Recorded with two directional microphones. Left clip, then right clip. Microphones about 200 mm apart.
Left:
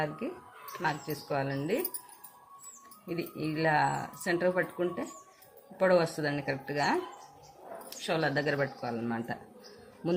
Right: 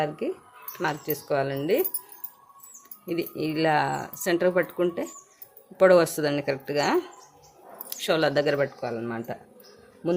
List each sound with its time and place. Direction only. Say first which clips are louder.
0.2 s speech: right 8 dB; 50° right (ahead or behind)
3.1 s speech: right 7 dB; 50° right (ahead or behind); by 9.4 s 30° right (ahead or behind)